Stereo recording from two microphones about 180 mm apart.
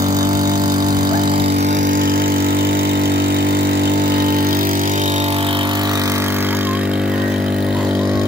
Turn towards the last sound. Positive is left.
turn(degrees=-5)  # may be behind; listen again after turning